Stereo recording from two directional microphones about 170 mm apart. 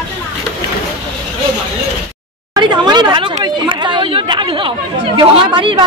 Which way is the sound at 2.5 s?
25° right (ahead or behind).